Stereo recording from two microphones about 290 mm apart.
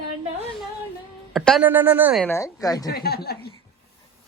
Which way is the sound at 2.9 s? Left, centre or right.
Left.